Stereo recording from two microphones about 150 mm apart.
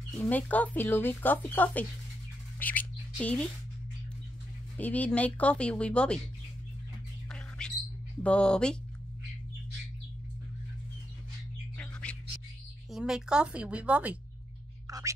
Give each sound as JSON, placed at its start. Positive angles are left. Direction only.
{"t": 0.2, "sound": "speech", "side_deg": 10}
{"t": 2.6, "sound": "whispering", "side_deg": 10}
{"t": 4.7, "sound": "speech", "side_deg": 10}
{"t": 7.2, "sound": "bird", "side_deg": 5}
{"t": 8.2, "sound": "speech", "side_deg": 10}
{"t": 11.7, "sound": "bird", "side_deg": 10}
{"t": 12.9, "sound": "speech", "side_deg": -5}
{"t": 14.9, "sound": "whispering", "side_deg": -25}